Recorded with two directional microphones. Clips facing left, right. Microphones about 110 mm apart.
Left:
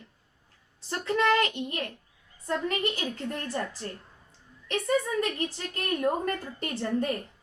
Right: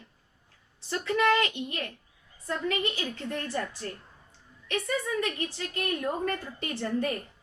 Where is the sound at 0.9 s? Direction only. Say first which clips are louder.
Even; 40° left (ahead or behind).